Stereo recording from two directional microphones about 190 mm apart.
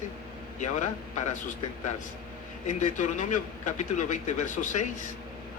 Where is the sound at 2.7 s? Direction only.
40° left (ahead or behind).